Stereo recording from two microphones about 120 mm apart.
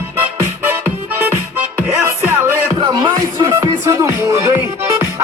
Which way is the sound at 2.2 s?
20° right (ahead or behind).